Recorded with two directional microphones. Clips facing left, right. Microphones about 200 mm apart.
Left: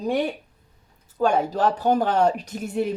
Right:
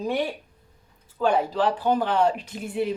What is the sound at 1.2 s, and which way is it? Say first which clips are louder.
Speech: left 1 dB; 45° left (ahead or behind).